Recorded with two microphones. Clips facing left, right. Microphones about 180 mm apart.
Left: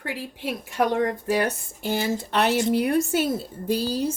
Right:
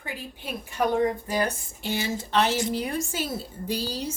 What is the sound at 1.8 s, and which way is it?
Speech, 50° left (ahead or behind).